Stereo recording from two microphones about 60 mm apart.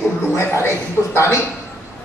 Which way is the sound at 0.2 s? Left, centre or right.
Left.